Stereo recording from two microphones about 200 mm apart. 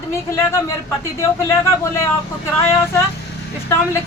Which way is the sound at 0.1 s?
15° left (ahead or behind).